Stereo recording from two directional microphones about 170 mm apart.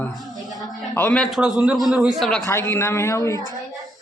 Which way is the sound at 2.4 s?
15° left (ahead or behind).